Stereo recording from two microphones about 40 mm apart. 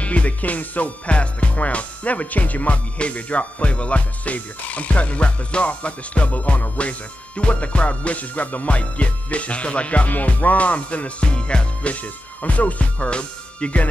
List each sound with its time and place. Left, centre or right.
0.0 s music: left